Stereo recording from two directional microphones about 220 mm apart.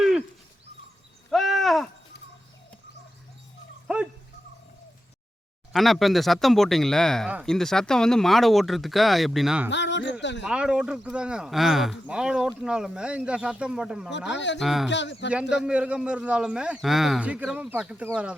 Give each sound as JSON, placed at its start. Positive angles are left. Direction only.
{"t": 0.0, "sound": "a sound", "side_deg": 0}
{"t": 1.3, "sound": "a sound", "side_deg": 0}
{"t": 3.8, "sound": "dog", "side_deg": -5}
{"t": 5.7, "sound": "speech", "side_deg": 0}
{"t": 9.6, "sound": "speech", "side_deg": 55}
{"t": 10.4, "sound": "speech", "side_deg": -5}
{"t": 14.3, "sound": "speech", "side_deg": 55}
{"t": 14.6, "sound": "speech", "side_deg": 0}
{"t": 14.8, "sound": "speech", "side_deg": 55}
{"t": 15.3, "sound": "speech", "side_deg": -5}